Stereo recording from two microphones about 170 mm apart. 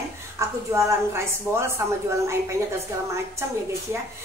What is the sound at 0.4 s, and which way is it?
A woman's voice, 15° right (ahead or behind).